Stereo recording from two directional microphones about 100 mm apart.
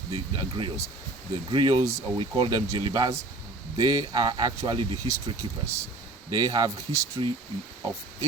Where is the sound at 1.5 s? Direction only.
50° right (ahead or behind).